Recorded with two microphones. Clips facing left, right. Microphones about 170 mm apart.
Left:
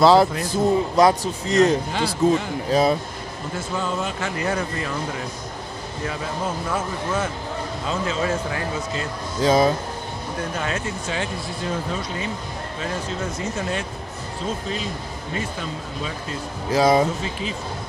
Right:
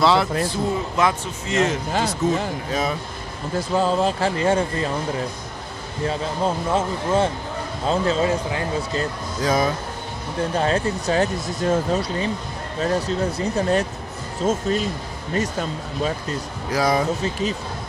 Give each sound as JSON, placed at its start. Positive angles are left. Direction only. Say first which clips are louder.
{"t": 0.0, "sound": "speech", "louder": "left 3 dB", "side_deg": 40}
{"t": 3.5, "sound": "speech", "louder": "right 7 dB", "side_deg": -35}
{"t": 6.0, "sound": "speech", "louder": "right 5 dB", "side_deg": -30}
{"t": 9.4, "sound": "speech", "louder": "left 3 dB", "side_deg": 25}
{"t": 10.5, "sound": "speech", "louder": "right 9 dB", "side_deg": -35}
{"t": 16.7, "sound": "speech", "louder": "left 3 dB", "side_deg": 25}
{"t": 17.2, "sound": "speech", "louder": "right 4 dB", "side_deg": -40}